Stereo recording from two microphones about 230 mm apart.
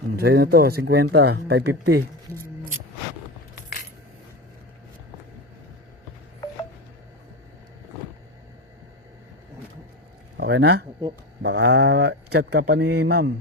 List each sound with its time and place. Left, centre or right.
0.2 s speech: right
10.3 s speech: right